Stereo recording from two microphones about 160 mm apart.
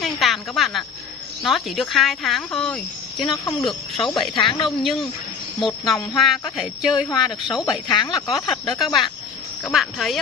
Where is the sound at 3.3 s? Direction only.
20° left (ahead or behind).